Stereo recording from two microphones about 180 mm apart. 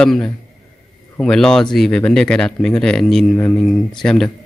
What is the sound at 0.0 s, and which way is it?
Speech, 5° left (ahead or behind).